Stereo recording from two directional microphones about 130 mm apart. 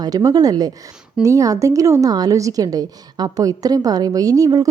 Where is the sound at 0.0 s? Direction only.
30° right (ahead or behind).